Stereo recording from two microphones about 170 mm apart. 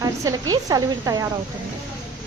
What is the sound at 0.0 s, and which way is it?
A woman's voice, 20° right (ahead or behind).